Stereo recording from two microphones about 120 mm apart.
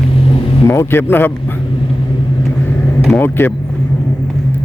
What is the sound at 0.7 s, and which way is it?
Speech, 20° left (ahead or behind).